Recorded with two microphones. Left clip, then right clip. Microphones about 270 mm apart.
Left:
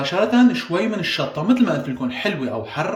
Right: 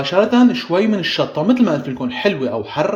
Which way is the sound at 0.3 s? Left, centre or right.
Centre.